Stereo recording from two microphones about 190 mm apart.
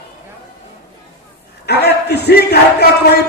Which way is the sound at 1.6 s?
60° left (ahead or behind).